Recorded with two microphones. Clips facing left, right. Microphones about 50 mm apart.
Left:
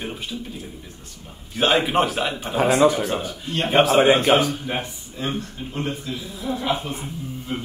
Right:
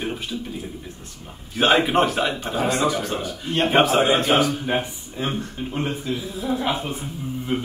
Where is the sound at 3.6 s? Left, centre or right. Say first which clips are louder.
Left 1 dB; centre.